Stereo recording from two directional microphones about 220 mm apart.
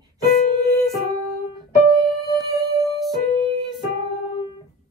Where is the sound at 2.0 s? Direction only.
15° right (ahead or behind).